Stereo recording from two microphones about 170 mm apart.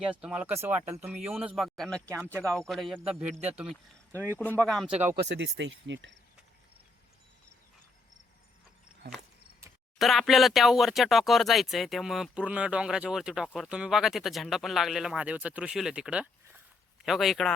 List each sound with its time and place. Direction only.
0.0 s speech: 5° right (ahead or behind)
5.3 s speech: 90° right
10.0 s speech: centre (ahead or behind)